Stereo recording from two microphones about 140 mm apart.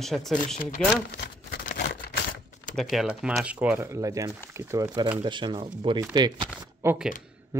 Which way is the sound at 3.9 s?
25° right (ahead or behind).